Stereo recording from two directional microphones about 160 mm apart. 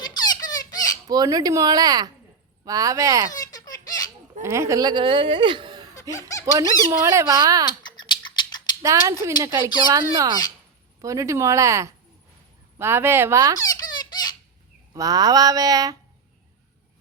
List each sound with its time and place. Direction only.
0.2 s squeak: 25° left (ahead or behind)
1.0 s speech: 25° right (ahead or behind)
3.2 s baby laughter: 25° left (ahead or behind)
4.4 s speech: 20° right (ahead or behind)
5.9 s laughter: 20° left (ahead or behind)
6.4 s speech: 20° right (ahead or behind)
7.8 s a sound: 30° left (ahead or behind)
8.8 s speech: 20° right (ahead or behind)
13.6 s baby laughter: 25° left (ahead or behind)
14.9 s speech: 25° right (ahead or behind)